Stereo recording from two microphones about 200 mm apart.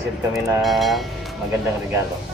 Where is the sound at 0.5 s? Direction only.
Centre (ahead or behind).